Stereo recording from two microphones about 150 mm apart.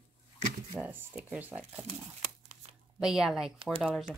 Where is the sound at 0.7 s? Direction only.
10° right (ahead or behind).